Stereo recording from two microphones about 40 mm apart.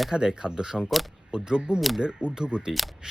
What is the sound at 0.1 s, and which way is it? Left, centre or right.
Speech, right.